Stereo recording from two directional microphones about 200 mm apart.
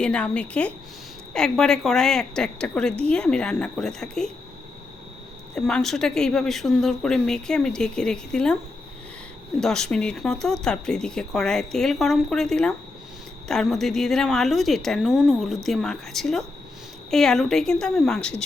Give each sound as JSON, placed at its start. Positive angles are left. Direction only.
{"t": 0.0, "sound": "speech", "side_deg": 5}
{"t": 5.5, "sound": "speech", "side_deg": 5}
{"t": 9.6, "sound": "speech", "side_deg": 0}